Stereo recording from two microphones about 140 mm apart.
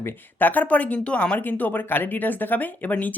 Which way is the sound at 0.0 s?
15° left (ahead or behind).